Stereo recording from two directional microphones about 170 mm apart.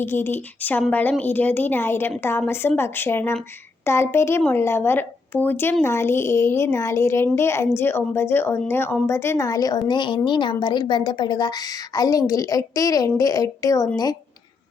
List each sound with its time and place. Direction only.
0.0 s a woman's voice: 15° left (ahead or behind)